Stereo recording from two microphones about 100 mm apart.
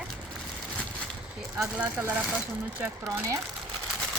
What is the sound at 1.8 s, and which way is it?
Speech, 15° right (ahead or behind).